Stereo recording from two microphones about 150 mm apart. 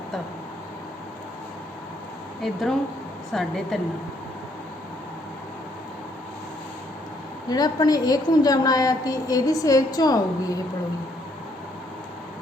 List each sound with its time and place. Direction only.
2.4 s a woman's voice: centre (ahead or behind)
7.5 s a woman's voice: 25° left (ahead or behind)